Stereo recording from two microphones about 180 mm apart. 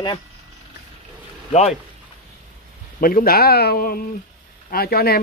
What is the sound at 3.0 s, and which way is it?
Speech, 55° left (ahead or behind).